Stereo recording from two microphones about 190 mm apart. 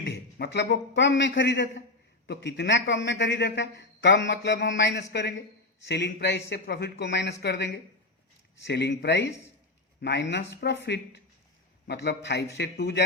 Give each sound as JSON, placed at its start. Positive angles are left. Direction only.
{"t": 0.0, "sound": "a man's voice", "side_deg": 60}
{"t": 9.2, "sound": "speech", "side_deg": 15}
{"t": 10.0, "sound": "a man's voice", "side_deg": 65}